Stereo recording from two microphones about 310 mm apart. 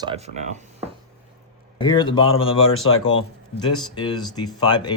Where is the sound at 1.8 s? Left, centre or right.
Centre.